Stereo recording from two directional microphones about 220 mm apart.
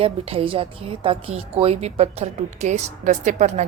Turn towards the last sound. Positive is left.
turn(degrees=-30)  # may be behind; listen again after turning